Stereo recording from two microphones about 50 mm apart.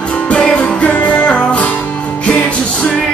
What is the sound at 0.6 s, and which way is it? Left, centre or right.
Music, left.